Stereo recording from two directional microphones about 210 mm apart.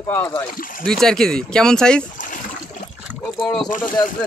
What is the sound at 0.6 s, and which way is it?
Speech, 40° left (ahead or behind).